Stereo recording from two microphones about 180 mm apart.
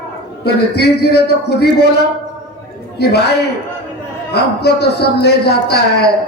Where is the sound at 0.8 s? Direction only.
65° left (ahead or behind).